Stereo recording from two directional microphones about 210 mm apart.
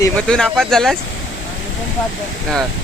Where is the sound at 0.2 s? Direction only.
5° left (ahead or behind).